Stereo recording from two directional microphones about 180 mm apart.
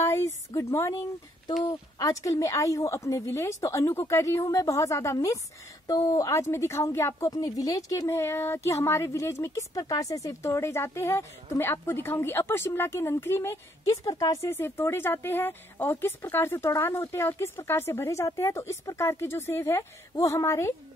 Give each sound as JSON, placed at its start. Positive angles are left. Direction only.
{"t": 0.0, "sound": "a woman's voice", "side_deg": 15}